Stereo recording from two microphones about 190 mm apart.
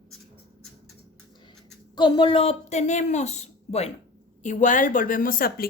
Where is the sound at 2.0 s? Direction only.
25° left (ahead or behind).